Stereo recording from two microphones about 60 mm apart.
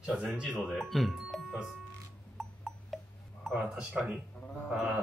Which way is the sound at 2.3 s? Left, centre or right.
Centre.